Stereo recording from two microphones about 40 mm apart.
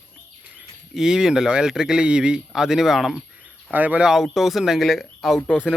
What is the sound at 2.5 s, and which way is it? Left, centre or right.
Speech, centre.